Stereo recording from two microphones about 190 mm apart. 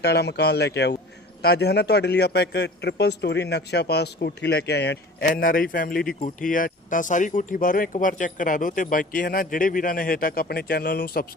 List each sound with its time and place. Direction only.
0.0 s a man's voice: 60° left (ahead or behind)
5.3 s speech: 45° left (ahead or behind)